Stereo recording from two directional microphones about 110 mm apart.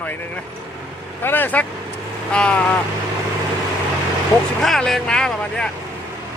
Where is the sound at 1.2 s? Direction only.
20° left (ahead or behind).